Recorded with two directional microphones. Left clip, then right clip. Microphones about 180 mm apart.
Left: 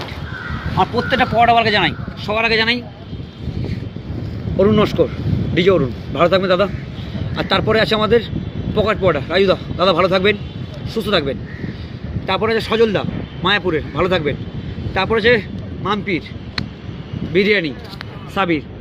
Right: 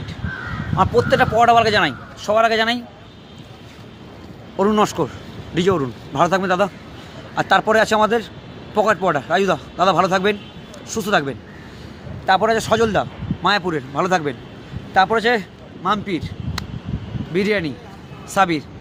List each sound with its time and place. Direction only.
0.8 s a man's voice: 20° right (ahead or behind)
4.6 s a man's voice: 20° right (ahead or behind)
17.3 s a man's voice: 20° right (ahead or behind)